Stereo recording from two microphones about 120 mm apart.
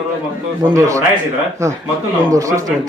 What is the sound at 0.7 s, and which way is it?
A man's voice, 25° right (ahead or behind).